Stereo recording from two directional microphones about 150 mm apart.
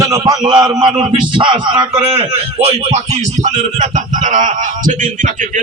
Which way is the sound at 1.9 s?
45° right (ahead or behind).